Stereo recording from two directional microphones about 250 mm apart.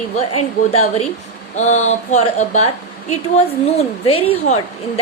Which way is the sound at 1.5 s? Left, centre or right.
Left.